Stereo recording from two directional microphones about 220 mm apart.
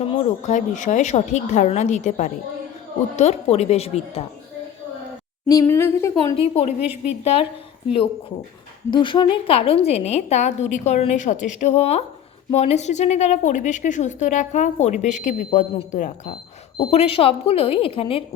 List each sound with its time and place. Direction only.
0.1 s a woman's voice: 30° left (ahead or behind)
5.5 s speech: 15° left (ahead or behind)
6.3 s a woman's voice: 25° left (ahead or behind)
8.9 s a woman's voice: 20° left (ahead or behind)